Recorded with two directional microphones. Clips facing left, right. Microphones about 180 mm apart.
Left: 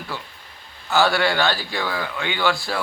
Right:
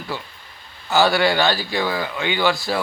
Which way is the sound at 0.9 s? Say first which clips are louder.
Right 2 dB; 5° right (ahead or behind).